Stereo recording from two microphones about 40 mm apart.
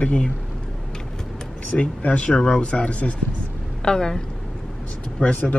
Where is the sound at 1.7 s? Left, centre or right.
Left.